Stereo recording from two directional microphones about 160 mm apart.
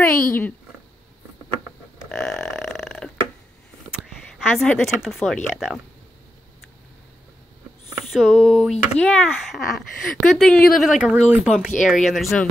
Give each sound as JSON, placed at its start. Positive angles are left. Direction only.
{"t": 0.0, "sound": "speech", "side_deg": 15}
{"t": 2.0, "sound": "burping", "side_deg": 15}
{"t": 2.8, "sound": "a sound", "side_deg": 10}
{"t": 4.8, "sound": "speech", "side_deg": 0}
{"t": 7.9, "sound": "speech", "side_deg": 0}